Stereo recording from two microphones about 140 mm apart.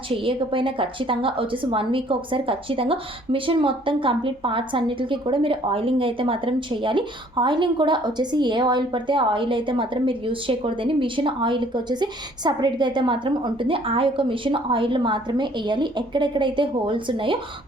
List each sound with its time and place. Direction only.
0.1 s a woman's voice: 40° right (ahead or behind)